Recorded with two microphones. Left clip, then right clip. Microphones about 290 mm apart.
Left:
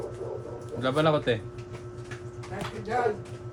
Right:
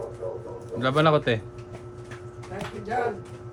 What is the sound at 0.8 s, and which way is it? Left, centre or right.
Speech, right.